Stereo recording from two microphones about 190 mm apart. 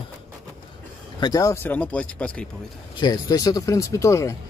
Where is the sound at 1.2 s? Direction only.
20° left (ahead or behind).